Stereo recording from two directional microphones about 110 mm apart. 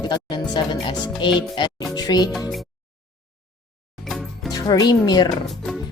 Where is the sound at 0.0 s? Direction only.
40° left (ahead or behind).